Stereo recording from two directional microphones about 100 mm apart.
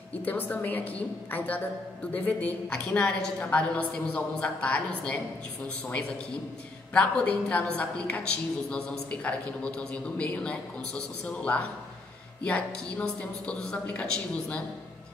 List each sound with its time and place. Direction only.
0.2 s a man's voice: 15° left (ahead or behind)
6.9 s a man's voice: 10° left (ahead or behind)